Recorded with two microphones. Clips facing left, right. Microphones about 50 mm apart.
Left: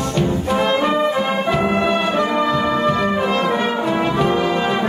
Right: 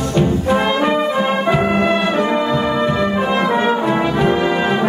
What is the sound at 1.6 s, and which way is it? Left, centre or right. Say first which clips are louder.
Brass instrument: right 2 dB; right.